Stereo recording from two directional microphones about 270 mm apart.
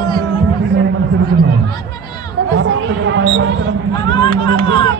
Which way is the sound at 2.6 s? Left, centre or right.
Right.